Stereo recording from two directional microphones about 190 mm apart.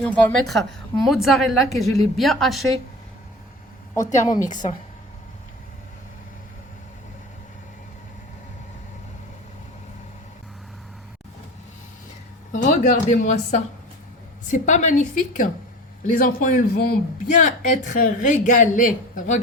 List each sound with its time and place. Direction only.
0.0 s a woman's voice: 10° left (ahead or behind)
4.0 s a woman's voice: 40° left (ahead or behind)
12.5 s a woman's voice: 40° left (ahead or behind)